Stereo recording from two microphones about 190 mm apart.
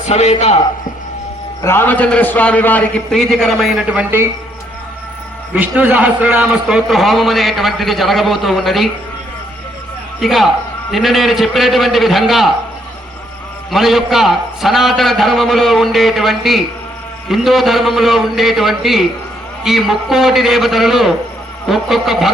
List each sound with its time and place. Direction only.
0.0 s a man's voice: 35° left (ahead or behind)
1.6 s a man's voice: 10° left (ahead or behind); by 4.3 s 10° right (ahead or behind)
5.5 s a man's voice: 10° right (ahead or behind)
10.2 s a man's voice: centre (ahead or behind)
13.7 s a man's voice: centre (ahead or behind)